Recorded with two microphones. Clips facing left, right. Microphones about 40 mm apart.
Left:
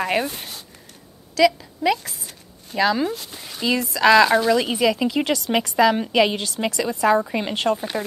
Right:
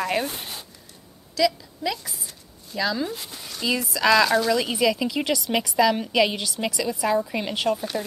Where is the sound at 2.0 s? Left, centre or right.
Left.